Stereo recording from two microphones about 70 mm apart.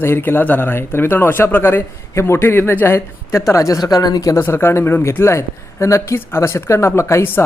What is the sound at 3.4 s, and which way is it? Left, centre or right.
Speech, left.